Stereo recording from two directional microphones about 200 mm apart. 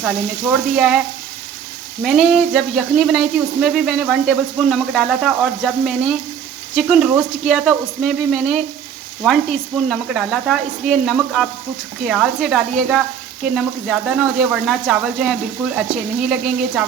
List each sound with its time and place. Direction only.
0.0 s speech: 5° right (ahead or behind)
2.0 s speech: 5° right (ahead or behind)